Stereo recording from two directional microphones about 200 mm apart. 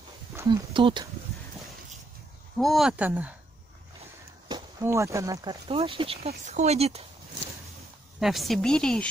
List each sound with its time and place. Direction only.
0.4 s speech: 25° right (ahead or behind)
2.5 s speech: centre (ahead or behind)
4.5 s speech: 15° right (ahead or behind); by 7.0 s 30° right (ahead or behind)
8.2 s speech: centre (ahead or behind)